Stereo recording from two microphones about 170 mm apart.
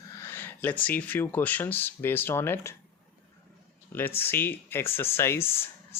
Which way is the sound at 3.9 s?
10° left (ahead or behind).